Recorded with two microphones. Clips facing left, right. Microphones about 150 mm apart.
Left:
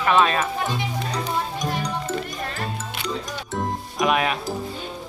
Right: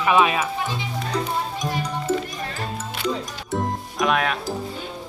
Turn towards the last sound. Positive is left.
turn(degrees=0)  # may be behind; listen again after turning